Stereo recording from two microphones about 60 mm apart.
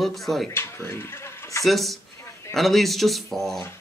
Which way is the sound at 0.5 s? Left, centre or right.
Left.